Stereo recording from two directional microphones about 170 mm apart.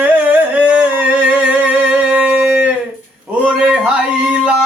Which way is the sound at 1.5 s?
5° right (ahead or behind).